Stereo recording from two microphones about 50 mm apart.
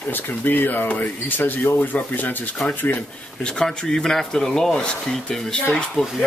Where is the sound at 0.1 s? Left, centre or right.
Left.